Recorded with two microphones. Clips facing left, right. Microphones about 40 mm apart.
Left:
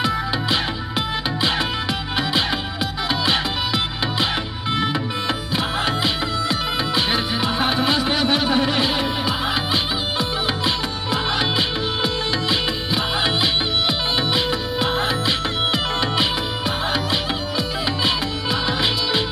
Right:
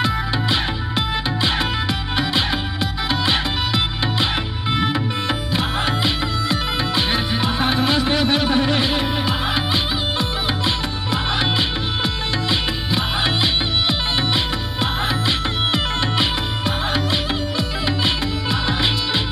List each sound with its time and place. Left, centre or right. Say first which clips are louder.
0.0 s music: right 1 dB; centre